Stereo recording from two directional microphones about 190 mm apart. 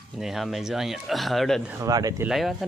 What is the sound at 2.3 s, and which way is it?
Speech, centre (ahead or behind).